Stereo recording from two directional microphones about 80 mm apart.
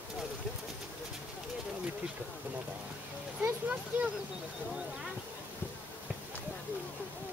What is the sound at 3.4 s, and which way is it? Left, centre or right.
Speech, right.